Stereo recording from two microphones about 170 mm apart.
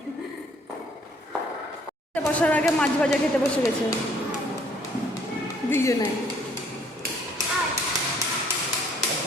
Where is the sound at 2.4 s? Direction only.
10° left (ahead or behind).